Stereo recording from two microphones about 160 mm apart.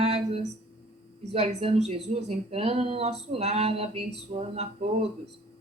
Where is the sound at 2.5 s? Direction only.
40° right (ahead or behind).